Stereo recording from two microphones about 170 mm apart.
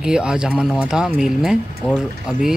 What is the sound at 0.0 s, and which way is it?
Speech, 5° right (ahead or behind).